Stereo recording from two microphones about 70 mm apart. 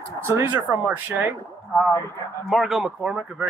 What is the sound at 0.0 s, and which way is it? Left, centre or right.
Speech, right.